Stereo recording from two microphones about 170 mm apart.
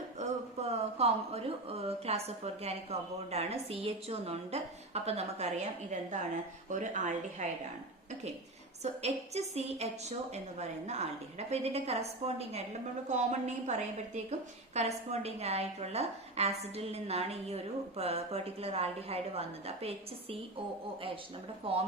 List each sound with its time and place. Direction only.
0.2 s a woman's voice: 40° right (ahead or behind)
8.8 s a woman's voice: 40° right (ahead or behind)
13.7 s a woman's voice: 40° right (ahead or behind)
21.6 s a woman's voice: 30° right (ahead or behind)